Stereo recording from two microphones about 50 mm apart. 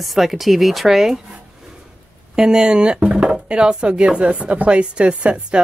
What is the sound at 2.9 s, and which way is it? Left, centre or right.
Chopping, right.